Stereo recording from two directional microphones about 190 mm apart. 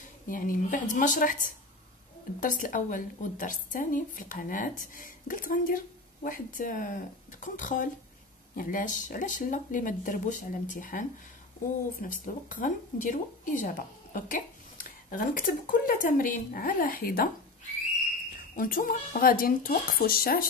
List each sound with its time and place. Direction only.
0.3 s a woman's voice: 45° left (ahead or behind)
12.1 s a woman's voice: 45° left (ahead or behind)
18.3 s a woman's voice: 45° left (ahead or behind)